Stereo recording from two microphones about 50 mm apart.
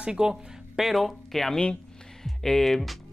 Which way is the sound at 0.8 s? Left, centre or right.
Centre.